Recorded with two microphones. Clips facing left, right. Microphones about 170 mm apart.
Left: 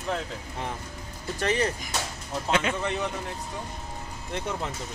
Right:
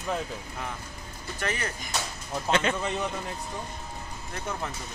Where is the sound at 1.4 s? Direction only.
25° left (ahead or behind).